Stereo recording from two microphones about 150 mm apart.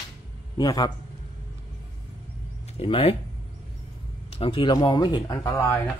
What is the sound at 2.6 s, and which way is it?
Speech, 40° left (ahead or behind).